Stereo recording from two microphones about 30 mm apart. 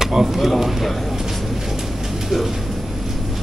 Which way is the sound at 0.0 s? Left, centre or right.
Centre.